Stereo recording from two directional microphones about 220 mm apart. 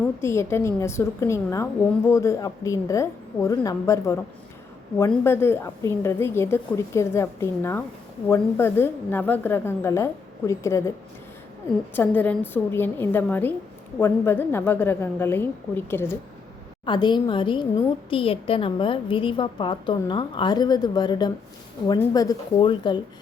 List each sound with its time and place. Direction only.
0.2 s a woman's voice: 10° left (ahead or behind)
11.9 s a woman's voice: 5° left (ahead or behind)